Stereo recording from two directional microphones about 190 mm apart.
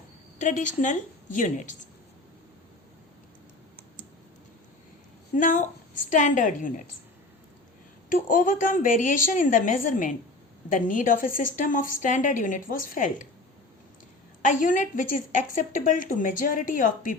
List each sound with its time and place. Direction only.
0.3 s a woman's voice: 40° left (ahead or behind)
5.4 s a woman's voice: 45° left (ahead or behind)
8.1 s a woman's voice: 45° left (ahead or behind)
14.4 s a woman's voice: 45° left (ahead or behind)